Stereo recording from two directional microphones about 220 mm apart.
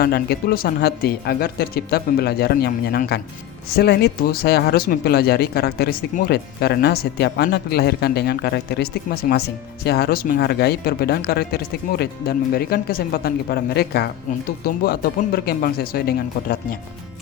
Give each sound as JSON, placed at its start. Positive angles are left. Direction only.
{"t": 0.0, "sound": "speech", "side_deg": 45}